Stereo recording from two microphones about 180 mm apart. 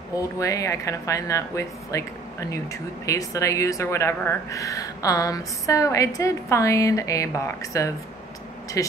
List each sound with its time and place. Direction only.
0.1 s speech: 20° left (ahead or behind)